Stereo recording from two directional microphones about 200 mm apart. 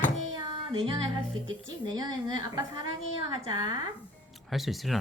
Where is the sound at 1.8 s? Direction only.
20° right (ahead or behind).